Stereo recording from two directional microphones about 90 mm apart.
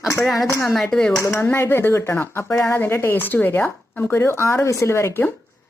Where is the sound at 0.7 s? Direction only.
5° left (ahead or behind).